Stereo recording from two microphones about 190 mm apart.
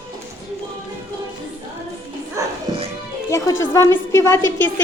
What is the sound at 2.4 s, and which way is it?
Music, 15° right (ahead or behind).